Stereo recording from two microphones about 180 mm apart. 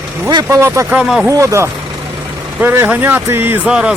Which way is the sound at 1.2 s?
15° right (ahead or behind).